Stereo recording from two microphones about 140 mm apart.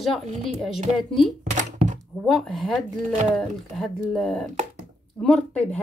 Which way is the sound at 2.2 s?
Centre (ahead or behind).